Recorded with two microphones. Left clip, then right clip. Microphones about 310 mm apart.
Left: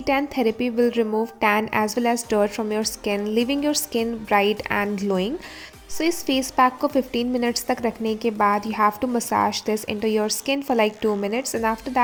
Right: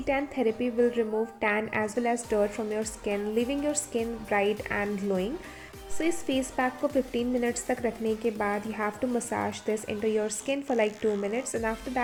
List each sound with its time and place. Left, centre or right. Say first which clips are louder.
0.0 s a woman's voice: left 6 dB; left